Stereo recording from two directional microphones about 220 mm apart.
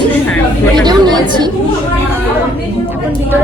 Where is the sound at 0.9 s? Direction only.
20° right (ahead or behind).